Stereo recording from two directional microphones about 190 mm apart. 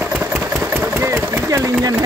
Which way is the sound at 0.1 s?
10° right (ahead or behind).